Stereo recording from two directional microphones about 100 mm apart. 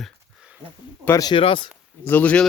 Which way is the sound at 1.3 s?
60° left (ahead or behind).